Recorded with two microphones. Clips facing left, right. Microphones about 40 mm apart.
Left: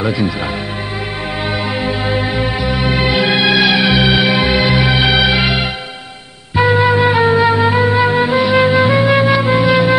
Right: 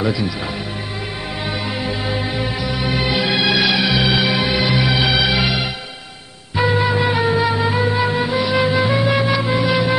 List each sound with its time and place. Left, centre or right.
1.8 s music: left
2.6 s music: left
2.9 s music: left
6.8 s music: left